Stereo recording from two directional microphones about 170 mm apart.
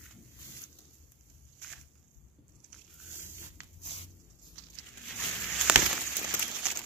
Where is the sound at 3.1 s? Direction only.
15° right (ahead or behind).